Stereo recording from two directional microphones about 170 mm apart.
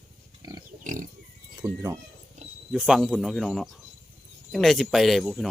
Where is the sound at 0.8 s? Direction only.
50° right (ahead or behind).